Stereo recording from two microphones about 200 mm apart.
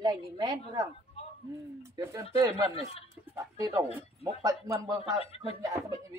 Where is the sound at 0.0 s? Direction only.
20° right (ahead or behind).